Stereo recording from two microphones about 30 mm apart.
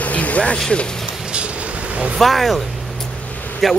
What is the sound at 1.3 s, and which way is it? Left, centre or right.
Vehicle, right.